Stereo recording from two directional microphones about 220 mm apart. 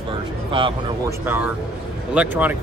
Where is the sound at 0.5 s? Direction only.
25° right (ahead or behind).